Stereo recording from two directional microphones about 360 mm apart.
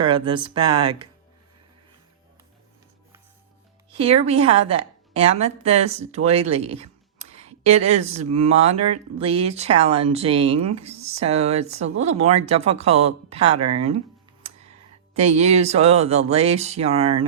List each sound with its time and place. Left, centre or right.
0.0 s speech: centre
4.0 s speech: centre
15.2 s speech: centre